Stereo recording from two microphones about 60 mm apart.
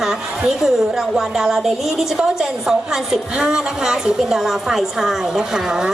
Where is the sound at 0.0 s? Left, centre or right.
Centre.